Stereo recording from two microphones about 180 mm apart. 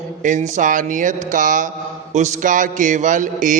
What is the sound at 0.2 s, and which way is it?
A man's voice, 45° right (ahead or behind).